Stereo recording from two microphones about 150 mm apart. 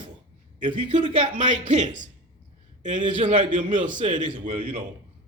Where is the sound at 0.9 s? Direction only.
50° right (ahead or behind).